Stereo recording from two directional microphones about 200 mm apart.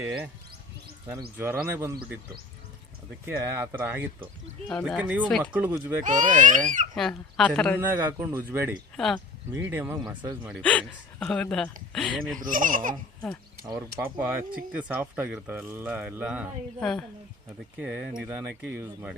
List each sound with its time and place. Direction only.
0.0 s speech: 5° right (ahead or behind)
1.4 s speech: 10° right (ahead or behind)
3.2 s speech: 10° right (ahead or behind)
4.7 s speech: centre (ahead or behind)
6.0 s speech: 40° right (ahead or behind)
6.9 s speech: 5° left (ahead or behind)
7.8 s speech: 10° right (ahead or behind)
9.0 s speech: centre (ahead or behind)
9.5 s speech: 10° right (ahead or behind)
10.6 s speech: 5° left (ahead or behind)
12.4 s speech: 45° right (ahead or behind)
13.7 s speech: 10° right (ahead or behind)